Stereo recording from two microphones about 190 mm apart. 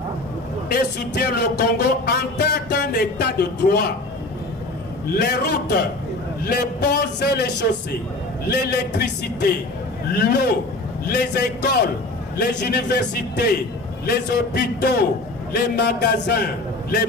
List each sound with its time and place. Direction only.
0.7 s speech: 60° left (ahead or behind)
5.1 s a man's voice: 55° left (ahead or behind)